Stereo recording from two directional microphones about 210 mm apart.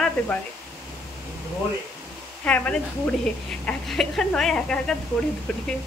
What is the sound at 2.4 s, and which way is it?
A woman's voice, 5° left (ahead or behind).